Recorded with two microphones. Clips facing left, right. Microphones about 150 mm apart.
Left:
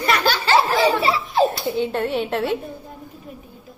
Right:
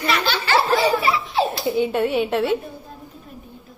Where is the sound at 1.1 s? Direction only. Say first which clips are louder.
Left 3 dB; 45° left (ahead or behind).